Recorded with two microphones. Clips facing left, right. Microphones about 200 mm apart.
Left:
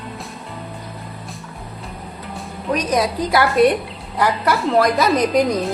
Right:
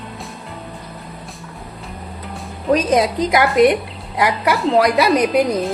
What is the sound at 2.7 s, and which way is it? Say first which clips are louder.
A woman's voice: right 4 dB; 25° right (ahead or behind).